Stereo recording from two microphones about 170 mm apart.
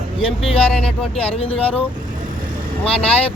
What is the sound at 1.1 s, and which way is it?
Speech, 35° left (ahead or behind).